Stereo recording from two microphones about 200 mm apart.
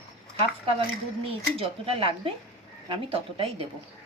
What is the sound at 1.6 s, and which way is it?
Speech, 25° right (ahead or behind).